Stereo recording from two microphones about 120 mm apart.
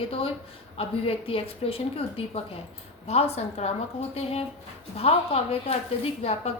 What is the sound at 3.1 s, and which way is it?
A woman's voice, 65° left (ahead or behind).